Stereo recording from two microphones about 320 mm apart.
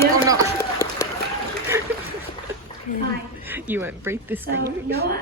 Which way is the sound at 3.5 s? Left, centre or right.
Centre.